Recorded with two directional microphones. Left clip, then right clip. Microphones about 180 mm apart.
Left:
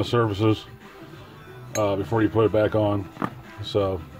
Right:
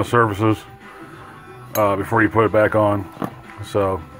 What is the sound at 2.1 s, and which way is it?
Speech, 10° left (ahead or behind).